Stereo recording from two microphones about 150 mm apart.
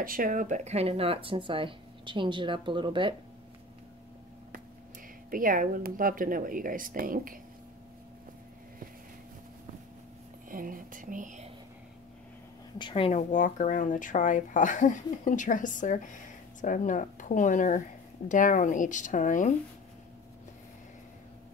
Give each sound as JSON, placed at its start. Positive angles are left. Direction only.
{"t": 0.0, "sound": "speech", "side_deg": -70}
{"t": 5.3, "sound": "speech", "side_deg": -65}
{"t": 10.5, "sound": "speech", "side_deg": -65}
{"t": 12.7, "sound": "a woman's voice", "side_deg": 35}
{"t": 13.3, "sound": "speech", "side_deg": 60}